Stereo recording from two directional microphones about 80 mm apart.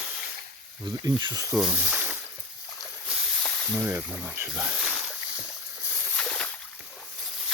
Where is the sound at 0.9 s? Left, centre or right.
Right.